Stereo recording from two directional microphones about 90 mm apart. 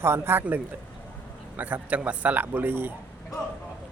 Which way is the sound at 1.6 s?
20° right (ahead or behind).